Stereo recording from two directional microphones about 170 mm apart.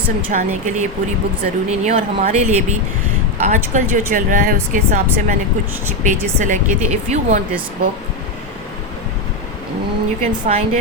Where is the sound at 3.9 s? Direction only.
50° right (ahead or behind).